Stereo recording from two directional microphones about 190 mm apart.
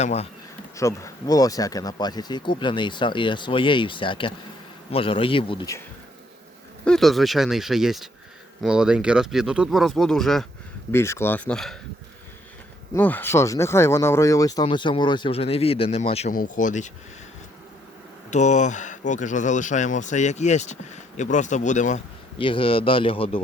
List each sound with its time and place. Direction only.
0.0 s speech: 35° left (ahead or behind)
0.8 s speech: 15° left (ahead or behind)
6.8 s speech: centre (ahead or behind)
10.9 s speech: 15° left (ahead or behind)
12.9 s speech: 10° left (ahead or behind); by 16.3 s 35° left (ahead or behind)
16.3 s speech: 45° left (ahead or behind)
18.3 s speech: 40° left (ahead or behind)
22.4 s speech: 25° left (ahead or behind)